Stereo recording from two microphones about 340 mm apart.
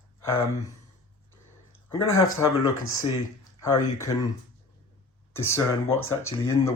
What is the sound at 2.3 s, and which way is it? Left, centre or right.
Speech, centre.